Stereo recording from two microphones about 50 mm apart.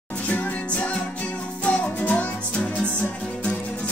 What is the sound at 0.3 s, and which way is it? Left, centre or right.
Music, left.